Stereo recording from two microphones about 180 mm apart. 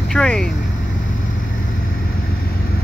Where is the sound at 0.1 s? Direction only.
5° left (ahead or behind).